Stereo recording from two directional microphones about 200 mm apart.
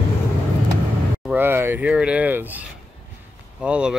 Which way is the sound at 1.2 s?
10° right (ahead or behind).